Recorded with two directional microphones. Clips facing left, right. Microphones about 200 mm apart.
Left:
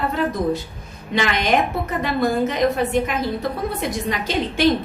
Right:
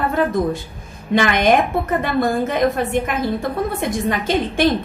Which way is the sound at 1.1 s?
50° right (ahead or behind).